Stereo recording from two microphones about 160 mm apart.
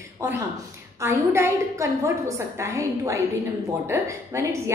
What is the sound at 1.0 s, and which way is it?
A woman's voice, 15° right (ahead or behind).